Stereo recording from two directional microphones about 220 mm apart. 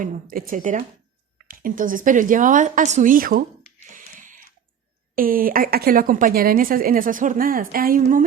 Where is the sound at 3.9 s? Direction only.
35° right (ahead or behind).